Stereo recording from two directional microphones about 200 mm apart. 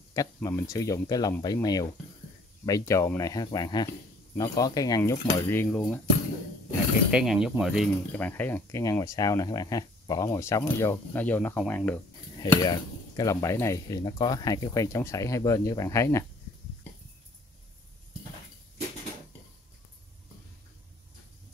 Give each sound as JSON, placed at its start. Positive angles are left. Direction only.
{"t": 0.1, "sound": "speech", "side_deg": 15}
{"t": 7.1, "sound": "speech", "side_deg": -5}
{"t": 8.3, "sound": "speech", "side_deg": 10}
{"t": 12.4, "sound": "speech", "side_deg": 20}